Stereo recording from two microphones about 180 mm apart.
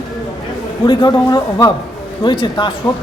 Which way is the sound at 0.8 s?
25° left (ahead or behind).